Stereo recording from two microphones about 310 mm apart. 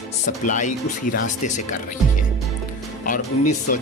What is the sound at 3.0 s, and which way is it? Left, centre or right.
Speech, left.